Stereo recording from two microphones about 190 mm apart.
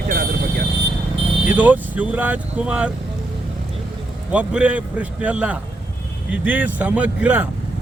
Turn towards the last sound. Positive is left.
turn(degrees=-10)  # may be behind; listen again after turning